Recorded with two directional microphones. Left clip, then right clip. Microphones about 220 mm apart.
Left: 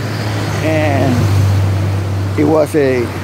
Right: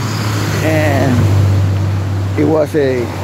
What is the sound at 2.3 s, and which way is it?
Speech, 5° left (ahead or behind).